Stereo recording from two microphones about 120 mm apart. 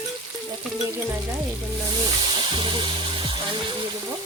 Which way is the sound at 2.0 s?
40° right (ahead or behind).